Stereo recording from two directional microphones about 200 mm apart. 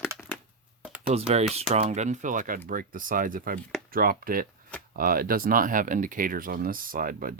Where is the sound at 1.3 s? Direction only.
35° right (ahead or behind).